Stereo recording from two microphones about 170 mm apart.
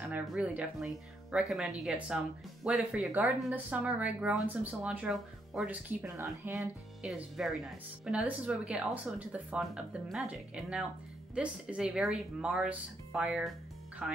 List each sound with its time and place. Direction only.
0.0 s speech: 5° right (ahead or behind)
6.6 s speech: centre (ahead or behind)